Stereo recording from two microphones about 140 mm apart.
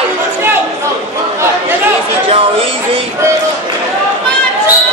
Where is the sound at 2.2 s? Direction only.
40° right (ahead or behind).